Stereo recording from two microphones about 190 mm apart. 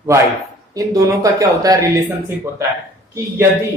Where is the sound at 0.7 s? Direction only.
15° right (ahead or behind).